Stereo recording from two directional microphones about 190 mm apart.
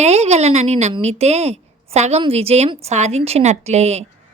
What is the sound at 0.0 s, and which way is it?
A woman's voice, 35° right (ahead or behind).